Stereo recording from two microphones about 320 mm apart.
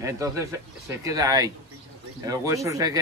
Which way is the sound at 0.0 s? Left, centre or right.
Centre.